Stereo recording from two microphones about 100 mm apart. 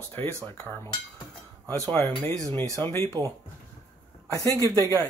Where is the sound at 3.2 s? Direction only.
40° right (ahead or behind).